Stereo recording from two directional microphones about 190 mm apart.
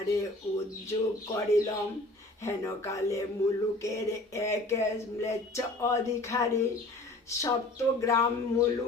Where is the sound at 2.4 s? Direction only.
15° left (ahead or behind).